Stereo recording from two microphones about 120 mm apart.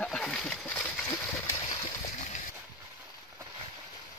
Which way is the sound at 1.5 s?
40° left (ahead or behind).